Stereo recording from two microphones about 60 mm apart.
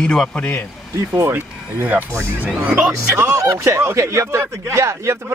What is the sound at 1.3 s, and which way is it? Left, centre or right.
Speech, right.